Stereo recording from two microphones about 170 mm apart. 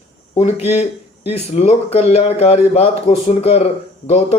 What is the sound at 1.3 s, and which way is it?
A man's voice, 40° left (ahead or behind).